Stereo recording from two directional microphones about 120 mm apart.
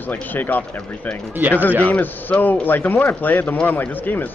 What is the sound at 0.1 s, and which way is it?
A man's voice, 15° left (ahead or behind).